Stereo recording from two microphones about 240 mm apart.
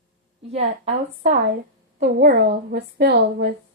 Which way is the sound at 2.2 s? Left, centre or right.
Right.